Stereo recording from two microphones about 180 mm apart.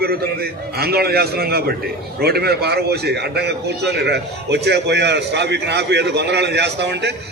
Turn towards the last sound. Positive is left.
turn(degrees=-70)  # may be behind; listen again after turning